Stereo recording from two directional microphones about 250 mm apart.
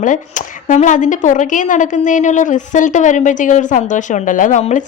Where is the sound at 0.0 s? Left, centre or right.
Left.